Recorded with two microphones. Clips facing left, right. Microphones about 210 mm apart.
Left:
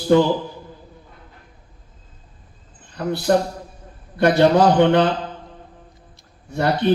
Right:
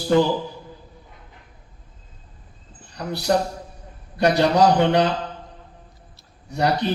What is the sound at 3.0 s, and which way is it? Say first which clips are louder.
A man's voice: left 3 dB; 50° left (ahead or behind).